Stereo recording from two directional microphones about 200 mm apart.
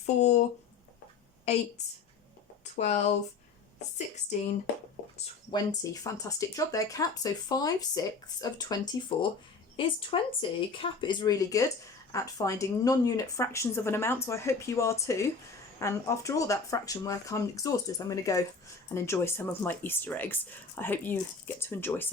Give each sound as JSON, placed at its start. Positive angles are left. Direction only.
{"t": 0.0, "sound": "speech", "side_deg": 35}
{"t": 1.5, "sound": "speech", "side_deg": 30}
{"t": 3.9, "sound": "speech", "side_deg": 35}
{"t": 5.1, "sound": "speech", "side_deg": 25}